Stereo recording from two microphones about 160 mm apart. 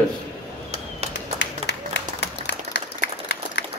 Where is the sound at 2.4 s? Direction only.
90° left.